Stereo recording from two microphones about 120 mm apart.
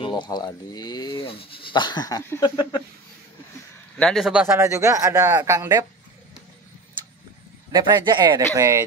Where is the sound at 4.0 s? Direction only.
5° left (ahead or behind).